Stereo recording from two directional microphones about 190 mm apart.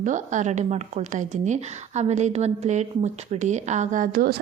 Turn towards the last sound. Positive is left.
turn(degrees=-50)  # may be behind; listen again after turning